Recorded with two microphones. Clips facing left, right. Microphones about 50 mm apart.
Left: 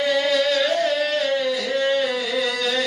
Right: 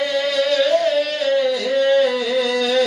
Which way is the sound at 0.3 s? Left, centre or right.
Centre.